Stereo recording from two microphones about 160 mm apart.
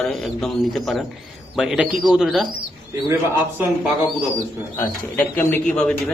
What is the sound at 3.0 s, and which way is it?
Speech, 15° right (ahead or behind).